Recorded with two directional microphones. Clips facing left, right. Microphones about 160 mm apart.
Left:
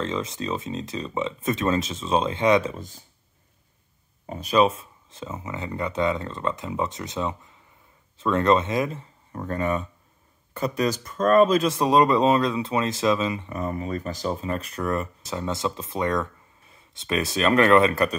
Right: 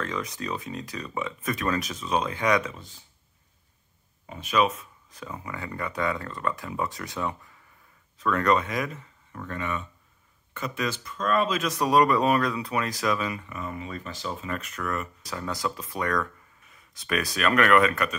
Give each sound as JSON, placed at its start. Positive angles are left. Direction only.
{"t": 0.0, "sound": "speech", "side_deg": 25}
{"t": 2.7, "sound": "speech", "side_deg": 45}
{"t": 4.3, "sound": "speech", "side_deg": 35}
{"t": 11.6, "sound": "speech", "side_deg": 25}
{"t": 13.5, "sound": "speech", "side_deg": 40}